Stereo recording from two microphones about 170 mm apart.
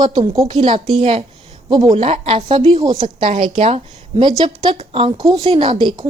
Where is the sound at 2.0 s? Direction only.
35° right (ahead or behind).